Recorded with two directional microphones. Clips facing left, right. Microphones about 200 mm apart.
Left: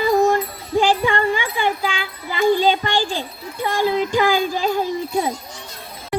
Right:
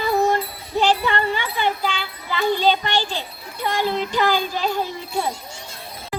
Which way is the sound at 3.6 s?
10° left (ahead or behind).